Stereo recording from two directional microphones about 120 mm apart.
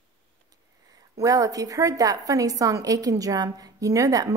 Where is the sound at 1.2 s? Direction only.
30° right (ahead or behind).